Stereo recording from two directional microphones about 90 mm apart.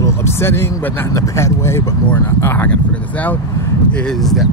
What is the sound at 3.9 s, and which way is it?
Speech, 5° left (ahead or behind).